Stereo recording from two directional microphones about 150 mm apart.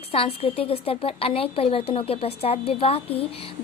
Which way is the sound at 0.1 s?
40° left (ahead or behind).